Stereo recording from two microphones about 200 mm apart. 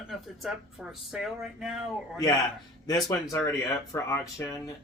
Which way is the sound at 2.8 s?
20° left (ahead or behind).